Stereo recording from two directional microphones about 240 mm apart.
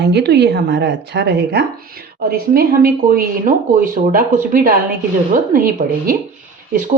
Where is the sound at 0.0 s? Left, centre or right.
Right.